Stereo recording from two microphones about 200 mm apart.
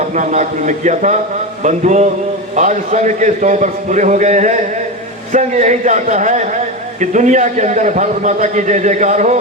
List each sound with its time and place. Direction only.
0.1 s a man's voice: 35° right (ahead or behind)